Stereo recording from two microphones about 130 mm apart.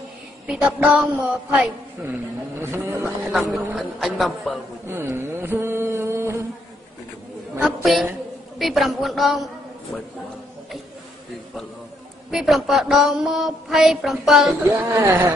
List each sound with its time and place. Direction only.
0.5 s a woman's voice: 10° right (ahead or behind)
3.3 s speech: 5° right (ahead or behind)
4.8 s mantra: 20° right (ahead or behind)
7.6 s speech: centre (ahead or behind)
12.3 s speech: centre (ahead or behind)
14.6 s a woman's voice: 15° right (ahead or behind)